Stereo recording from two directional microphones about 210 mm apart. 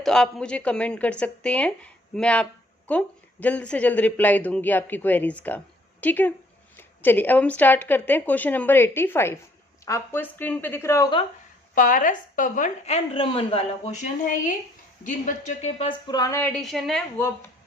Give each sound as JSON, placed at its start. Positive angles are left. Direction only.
{"t": 0.0, "sound": "speech", "side_deg": 0}
{"t": 11.7, "sound": "a woman's voice", "side_deg": 40}